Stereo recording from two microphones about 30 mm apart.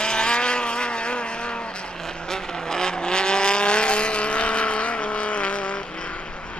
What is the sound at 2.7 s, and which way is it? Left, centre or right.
Vehicle, left.